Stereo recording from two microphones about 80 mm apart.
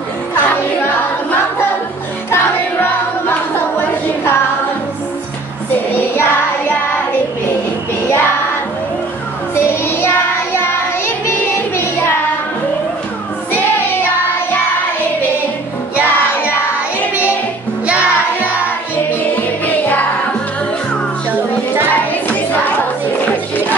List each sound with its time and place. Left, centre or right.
0.3 s music: left
2.3 s music: left
5.9 s child singing: left
8.1 s child singing: left
9.7 s child singing: left
13.5 s child singing: left
19.6 s music: left
21.9 s music: left